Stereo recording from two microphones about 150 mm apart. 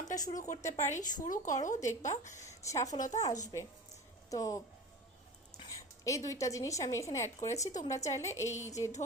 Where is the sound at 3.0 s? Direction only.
50° left (ahead or behind).